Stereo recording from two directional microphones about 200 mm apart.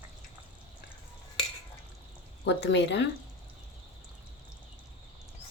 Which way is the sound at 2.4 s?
60° left (ahead or behind).